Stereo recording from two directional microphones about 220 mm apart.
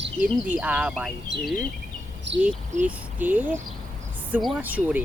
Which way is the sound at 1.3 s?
55° right (ahead or behind).